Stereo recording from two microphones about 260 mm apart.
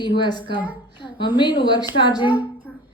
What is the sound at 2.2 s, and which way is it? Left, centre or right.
Speech, centre.